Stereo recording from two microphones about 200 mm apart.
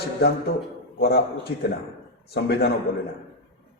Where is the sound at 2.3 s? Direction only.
55° left (ahead or behind).